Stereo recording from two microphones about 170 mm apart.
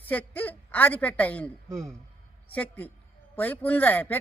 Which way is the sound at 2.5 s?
10° left (ahead or behind).